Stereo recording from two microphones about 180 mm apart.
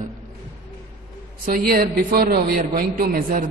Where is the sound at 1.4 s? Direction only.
55° right (ahead or behind).